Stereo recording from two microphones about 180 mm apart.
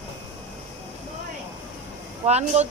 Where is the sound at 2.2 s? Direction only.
35° right (ahead or behind).